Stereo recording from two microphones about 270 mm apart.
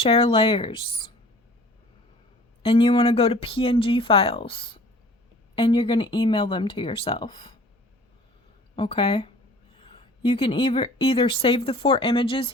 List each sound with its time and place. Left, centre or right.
0.0 s speech: left
2.6 s speech: centre
8.7 s speech: centre